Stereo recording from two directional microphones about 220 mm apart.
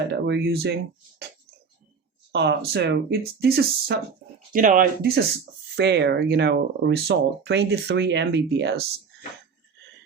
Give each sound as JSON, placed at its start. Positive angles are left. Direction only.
{"t": 0.1, "sound": "speech", "side_deg": -50}
{"t": 2.3, "sound": "speech", "side_deg": -50}